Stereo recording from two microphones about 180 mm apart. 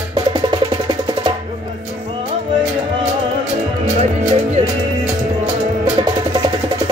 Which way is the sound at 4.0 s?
35° right (ahead or behind).